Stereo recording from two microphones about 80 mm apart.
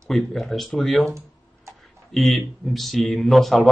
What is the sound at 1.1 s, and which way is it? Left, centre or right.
Computer keyboard, right.